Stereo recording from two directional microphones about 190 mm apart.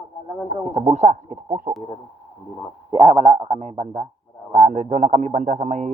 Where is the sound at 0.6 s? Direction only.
35° right (ahead or behind).